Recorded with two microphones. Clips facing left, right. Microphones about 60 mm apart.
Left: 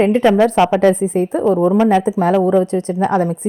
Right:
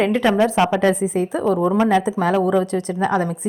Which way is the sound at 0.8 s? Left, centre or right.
Left.